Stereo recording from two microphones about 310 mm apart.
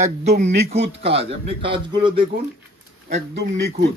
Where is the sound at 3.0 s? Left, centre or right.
Right.